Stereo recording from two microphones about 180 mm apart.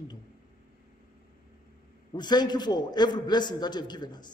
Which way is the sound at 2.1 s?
25° left (ahead or behind).